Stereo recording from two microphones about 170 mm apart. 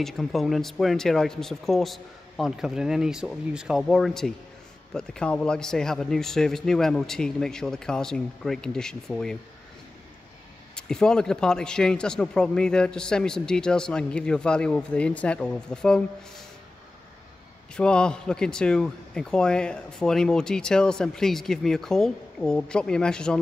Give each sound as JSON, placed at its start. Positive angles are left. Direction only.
{"t": 0.0, "sound": "a man's voice", "side_deg": 0}
{"t": 10.8, "sound": "a man's voice", "side_deg": 5}
{"t": 17.7, "sound": "a man's voice", "side_deg": 5}